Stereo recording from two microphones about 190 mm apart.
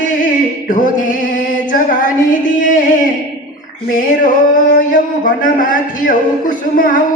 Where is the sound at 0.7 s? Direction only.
45° left (ahead or behind).